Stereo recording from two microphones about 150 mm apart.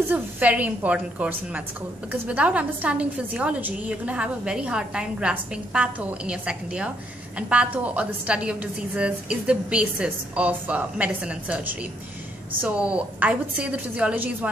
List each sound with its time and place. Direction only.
0.1 s a woman's voice: 10° right (ahead or behind)